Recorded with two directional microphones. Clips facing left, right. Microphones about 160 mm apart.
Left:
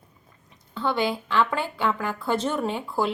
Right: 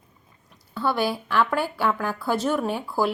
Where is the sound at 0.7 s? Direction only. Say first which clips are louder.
Right 1 dB; 5° right (ahead or behind).